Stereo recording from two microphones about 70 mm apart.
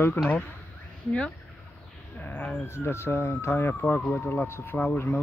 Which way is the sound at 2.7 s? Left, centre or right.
Left.